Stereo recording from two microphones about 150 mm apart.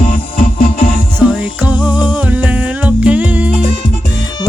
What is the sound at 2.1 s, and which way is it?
Music, 10° right (ahead or behind).